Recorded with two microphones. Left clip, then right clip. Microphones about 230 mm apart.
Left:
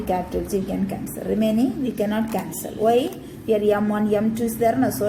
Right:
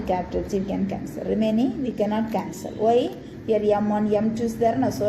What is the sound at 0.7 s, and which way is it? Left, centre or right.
A woman's voice, left.